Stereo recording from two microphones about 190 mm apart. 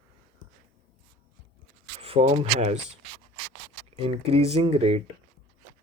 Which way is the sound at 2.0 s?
35° right (ahead or behind).